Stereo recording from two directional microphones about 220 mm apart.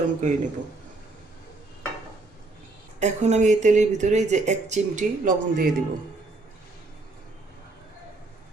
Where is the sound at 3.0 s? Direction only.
30° right (ahead or behind).